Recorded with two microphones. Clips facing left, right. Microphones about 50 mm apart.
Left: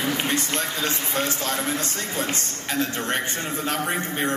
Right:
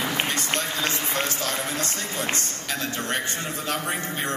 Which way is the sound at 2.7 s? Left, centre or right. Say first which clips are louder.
Left 4 dB; left.